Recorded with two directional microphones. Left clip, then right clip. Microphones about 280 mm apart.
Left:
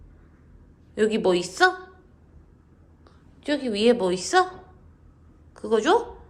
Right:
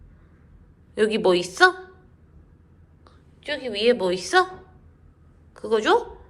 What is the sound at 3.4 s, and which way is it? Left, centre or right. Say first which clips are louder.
A woman's voice: left 1 dB; centre.